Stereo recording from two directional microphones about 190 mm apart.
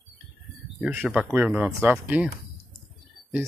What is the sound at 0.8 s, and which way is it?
Speech, 10° right (ahead or behind).